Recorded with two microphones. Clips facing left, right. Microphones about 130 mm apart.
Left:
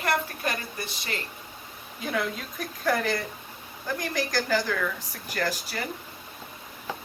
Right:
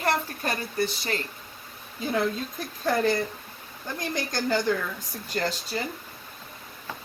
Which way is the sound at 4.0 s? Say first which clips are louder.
Even; 25° right (ahead or behind).